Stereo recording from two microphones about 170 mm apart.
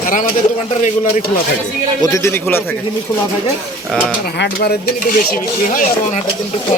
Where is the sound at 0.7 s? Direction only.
45° left (ahead or behind).